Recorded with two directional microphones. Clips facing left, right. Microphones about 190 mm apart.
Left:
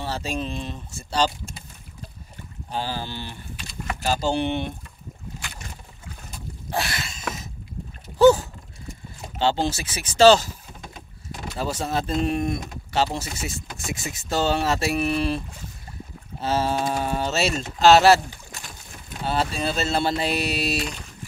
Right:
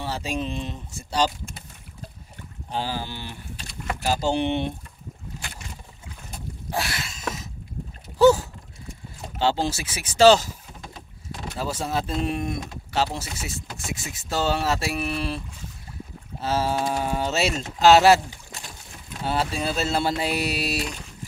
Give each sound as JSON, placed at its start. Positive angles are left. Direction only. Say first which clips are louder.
{"t": 0.0, "sound": "speech", "louder": "even", "side_deg": -15}
{"t": 2.7, "sound": "speech", "louder": "even", "side_deg": -15}
{"t": 6.7, "sound": "a sound", "louder": "left 1 dB", "side_deg": -5}
{"t": 8.2, "sound": "a sound", "louder": "left 1 dB", "side_deg": -5}
{"t": 9.4, "sound": "speech", "louder": "left 1 dB", "side_deg": -10}
{"t": 11.5, "sound": "speech", "louder": "left 1 dB", "side_deg": -5}
{"t": 19.2, "sound": "speech", "louder": "left 1 dB", "side_deg": -10}